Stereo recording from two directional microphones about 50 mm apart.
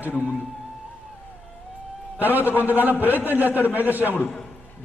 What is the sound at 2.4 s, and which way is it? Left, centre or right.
A man's voice, right.